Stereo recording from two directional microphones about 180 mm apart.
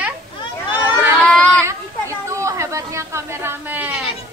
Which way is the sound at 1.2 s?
5° left (ahead or behind).